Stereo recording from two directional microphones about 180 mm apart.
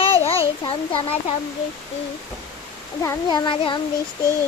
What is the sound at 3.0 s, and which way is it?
Speech, 25° left (ahead or behind).